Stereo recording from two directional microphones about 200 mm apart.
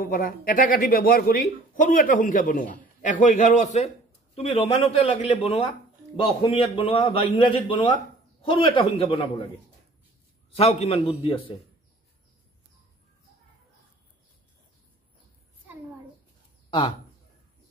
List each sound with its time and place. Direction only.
0.0 s a man's voice: 45° left (ahead or behind); by 9.3 s 30° left (ahead or behind)
10.5 s a man's voice: 30° left (ahead or behind)